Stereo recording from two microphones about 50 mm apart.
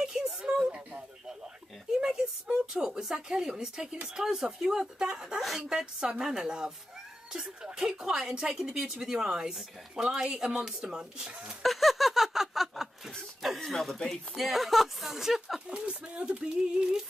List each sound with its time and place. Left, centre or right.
0.4 s a sound: centre
2.7 s speech: centre
11.6 s a sound: centre
13.6 s speech: centre
15.7 s speech: right
16.3 s speech: centre